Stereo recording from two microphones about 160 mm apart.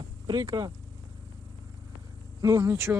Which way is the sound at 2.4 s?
20° right (ahead or behind).